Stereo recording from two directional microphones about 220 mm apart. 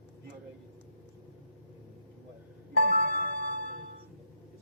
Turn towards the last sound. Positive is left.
turn(degrees=-40)  # may be behind; listen again after turning